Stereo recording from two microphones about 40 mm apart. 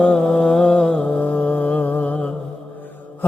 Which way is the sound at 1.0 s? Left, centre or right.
Left.